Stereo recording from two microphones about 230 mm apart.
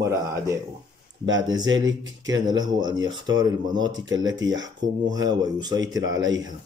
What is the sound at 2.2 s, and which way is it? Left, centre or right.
Speech, centre.